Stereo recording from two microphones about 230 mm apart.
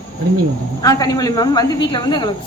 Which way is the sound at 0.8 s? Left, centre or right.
Centre.